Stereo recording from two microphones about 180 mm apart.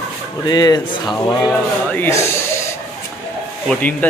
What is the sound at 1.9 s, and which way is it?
Speech, 10° left (ahead or behind).